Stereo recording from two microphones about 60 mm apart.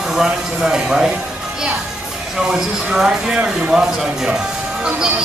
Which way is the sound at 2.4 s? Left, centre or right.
Centre.